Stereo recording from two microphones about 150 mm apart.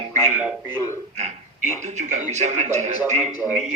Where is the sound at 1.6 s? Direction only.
50° right (ahead or behind).